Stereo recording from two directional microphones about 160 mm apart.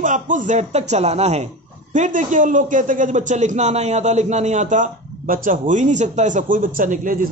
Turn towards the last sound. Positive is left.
turn(degrees=-55)  # may be behind; listen again after turning